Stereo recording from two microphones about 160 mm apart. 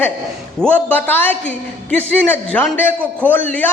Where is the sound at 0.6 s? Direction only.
10° left (ahead or behind).